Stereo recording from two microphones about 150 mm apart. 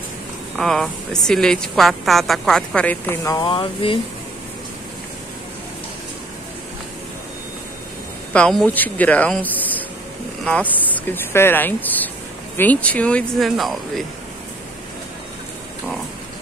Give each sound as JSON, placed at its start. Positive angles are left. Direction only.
{"t": 0.6, "sound": "a woman's voice", "side_deg": 5}
{"t": 3.3, "sound": "speech", "side_deg": 30}
{"t": 8.3, "sound": "speech", "side_deg": 5}
{"t": 10.9, "sound": "speech", "side_deg": 15}